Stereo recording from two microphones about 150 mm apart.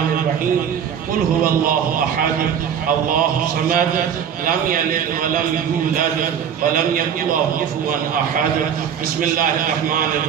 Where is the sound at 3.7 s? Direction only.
70° right (ahead or behind).